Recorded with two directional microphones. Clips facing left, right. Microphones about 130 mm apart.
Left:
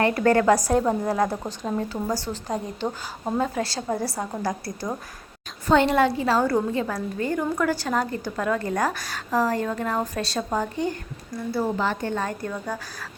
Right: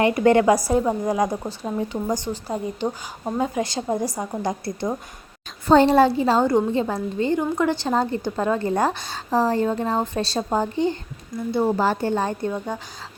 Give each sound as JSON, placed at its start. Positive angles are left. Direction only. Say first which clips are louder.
{"t": 0.0, "sound": "speech", "louder": "right 3 dB", "side_deg": -15}
{"t": 5.6, "sound": "a woman's voice", "louder": "right 4 dB", "side_deg": -35}